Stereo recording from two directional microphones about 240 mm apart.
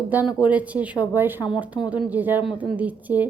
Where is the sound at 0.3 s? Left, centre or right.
Centre.